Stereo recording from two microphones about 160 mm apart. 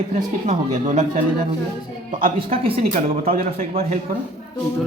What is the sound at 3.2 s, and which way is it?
Speech, 65° right (ahead or behind).